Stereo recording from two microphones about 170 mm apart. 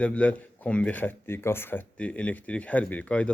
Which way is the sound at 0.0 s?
5° left (ahead or behind).